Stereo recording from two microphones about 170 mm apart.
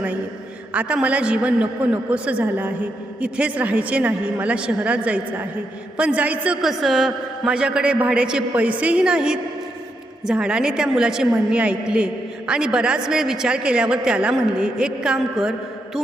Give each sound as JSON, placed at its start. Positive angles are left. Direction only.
{"t": 0.7, "sound": "a woman's voice", "side_deg": -10}